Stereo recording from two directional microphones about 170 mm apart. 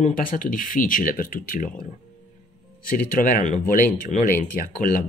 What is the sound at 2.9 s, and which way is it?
Speech, 55° left (ahead or behind).